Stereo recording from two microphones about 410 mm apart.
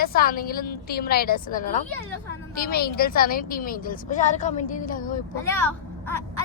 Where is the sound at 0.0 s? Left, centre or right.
Left.